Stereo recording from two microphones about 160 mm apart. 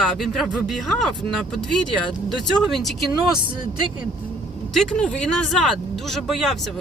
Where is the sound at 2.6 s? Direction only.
Centre (ahead or behind).